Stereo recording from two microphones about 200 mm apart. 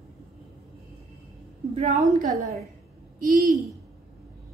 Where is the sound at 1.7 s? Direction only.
30° right (ahead or behind).